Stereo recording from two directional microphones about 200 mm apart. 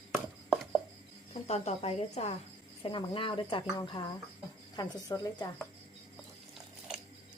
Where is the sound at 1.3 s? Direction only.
35° left (ahead or behind).